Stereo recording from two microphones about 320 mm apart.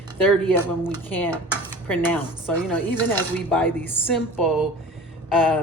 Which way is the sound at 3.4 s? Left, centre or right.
Centre.